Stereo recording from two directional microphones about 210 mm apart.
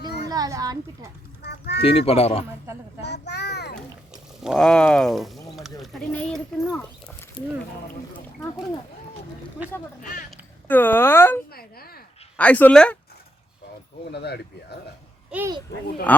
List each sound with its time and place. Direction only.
0.3 s a child's voice: 15° right (ahead or behind)
1.4 s a sound: 50° left (ahead or behind)
1.8 s speech: 30° left (ahead or behind)
3.0 s a sound: 55° left (ahead or behind)
3.8 s a sound: centre (ahead or behind)
5.8 s speech: centre (ahead or behind)
8.1 s speech: 20° left (ahead or behind)
10.7 s speech: 10° left (ahead or behind)
11.5 s a sound: 45° left (ahead or behind)
12.4 s speech: 5° left (ahead or behind)
14.1 s speech: 50° left (ahead or behind)
15.3 s a child's voice: 10° right (ahead or behind)
16.1 s speech: 10° left (ahead or behind)